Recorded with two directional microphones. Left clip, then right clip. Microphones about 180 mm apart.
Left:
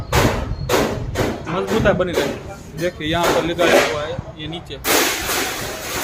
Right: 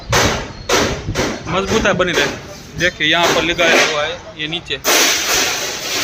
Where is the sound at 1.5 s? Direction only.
15° right (ahead or behind).